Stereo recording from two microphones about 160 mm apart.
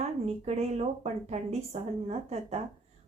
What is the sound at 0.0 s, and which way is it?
Speech, 40° right (ahead or behind).